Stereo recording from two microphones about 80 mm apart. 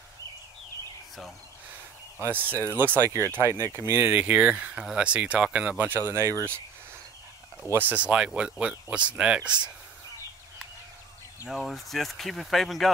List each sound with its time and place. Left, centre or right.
2.1 s speech: right
4.1 s speech: centre; by 6.5 s right
7.7 s speech: centre
11.4 s speech: centre